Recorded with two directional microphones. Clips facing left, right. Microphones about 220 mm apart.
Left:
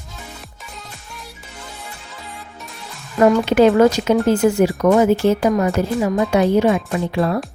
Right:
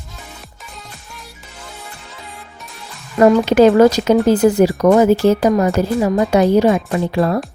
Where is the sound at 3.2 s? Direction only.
40° right (ahead or behind).